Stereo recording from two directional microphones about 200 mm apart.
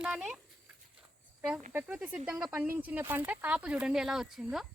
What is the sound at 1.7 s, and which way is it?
Speech, 5° right (ahead or behind).